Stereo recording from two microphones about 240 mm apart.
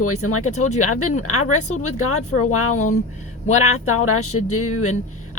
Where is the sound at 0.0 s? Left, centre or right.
Left.